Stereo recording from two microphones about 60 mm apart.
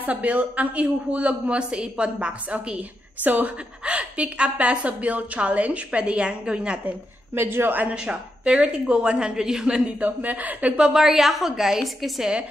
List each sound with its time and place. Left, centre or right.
0.0 s a woman's voice: right
3.3 s a woman's voice: right
7.3 s a woman's voice: right
7.9 s a woman's voice: centre
10.8 s a woman's voice: centre